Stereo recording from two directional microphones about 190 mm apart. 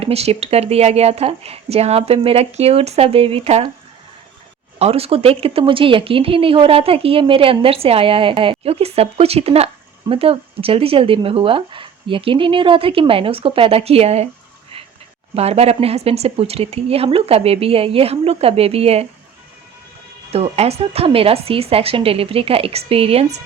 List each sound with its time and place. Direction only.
0.0 s speech: 30° right (ahead or behind)
4.8 s speech: 30° right (ahead or behind)
15.4 s speech: 35° right (ahead or behind)
20.3 s speech: 35° right (ahead or behind)